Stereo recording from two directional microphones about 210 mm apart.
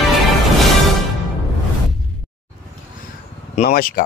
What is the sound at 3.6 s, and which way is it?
Speech, 45° left (ahead or behind).